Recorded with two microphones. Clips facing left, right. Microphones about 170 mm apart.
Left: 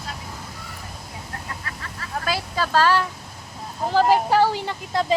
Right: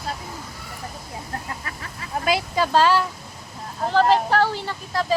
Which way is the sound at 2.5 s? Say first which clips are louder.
Right 1 dB; 15° right (ahead or behind).